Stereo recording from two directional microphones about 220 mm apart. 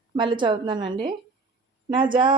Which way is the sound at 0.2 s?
20° right (ahead or behind).